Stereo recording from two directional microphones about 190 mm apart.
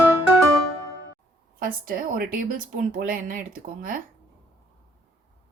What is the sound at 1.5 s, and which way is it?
Speech, 50° right (ahead or behind).